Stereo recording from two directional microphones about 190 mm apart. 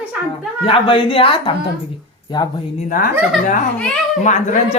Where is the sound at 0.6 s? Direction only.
25° left (ahead or behind).